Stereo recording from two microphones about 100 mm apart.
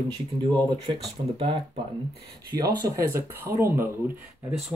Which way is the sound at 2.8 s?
35° right (ahead or behind).